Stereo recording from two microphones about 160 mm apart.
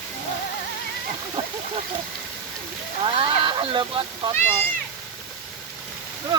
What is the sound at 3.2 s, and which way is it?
Speech, 30° right (ahead or behind).